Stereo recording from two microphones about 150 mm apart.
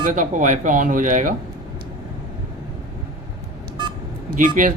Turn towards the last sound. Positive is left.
turn(degrees=-60)  # may be behind; listen again after turning